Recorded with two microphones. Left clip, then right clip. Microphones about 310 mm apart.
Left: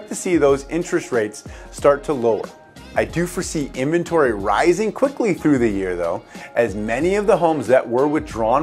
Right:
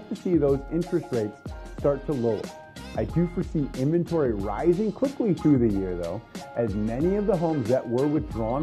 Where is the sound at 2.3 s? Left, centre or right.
Centre.